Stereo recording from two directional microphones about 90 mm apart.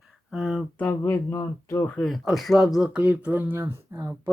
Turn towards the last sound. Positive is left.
turn(degrees=-30)  # may be behind; listen again after turning